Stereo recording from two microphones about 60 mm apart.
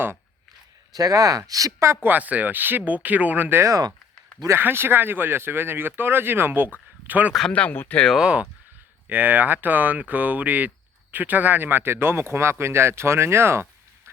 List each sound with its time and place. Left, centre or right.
0.9 s speech: right
2.0 s speech: right
3.6 s speech: right
4.5 s speech: right
7.7 s speech: left
8.1 s speech: centre
9.0 s speech: right